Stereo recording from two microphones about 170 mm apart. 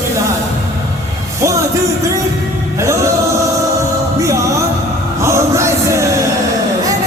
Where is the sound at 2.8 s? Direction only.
15° right (ahead or behind).